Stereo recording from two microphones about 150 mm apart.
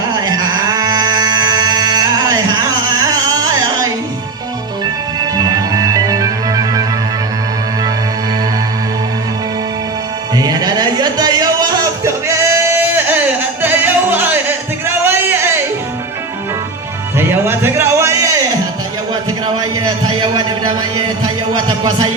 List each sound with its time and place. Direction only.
0.2 s a sound: 25° right (ahead or behind)
5.4 s music: 25° right (ahead or behind)
10.3 s music: 25° right (ahead or behind)
17.2 s music: 15° right (ahead or behind)
19.5 s a sound: 30° right (ahead or behind)
21.5 s music: 30° right (ahead or behind)